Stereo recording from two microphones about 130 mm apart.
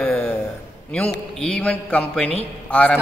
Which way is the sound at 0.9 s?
10° left (ahead or behind).